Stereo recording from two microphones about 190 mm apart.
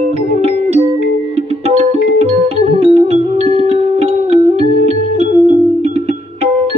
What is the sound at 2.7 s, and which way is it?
Music, 35° right (ahead or behind).